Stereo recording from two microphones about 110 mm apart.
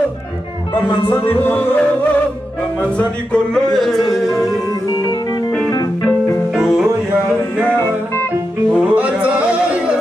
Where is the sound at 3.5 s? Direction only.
5° left (ahead or behind).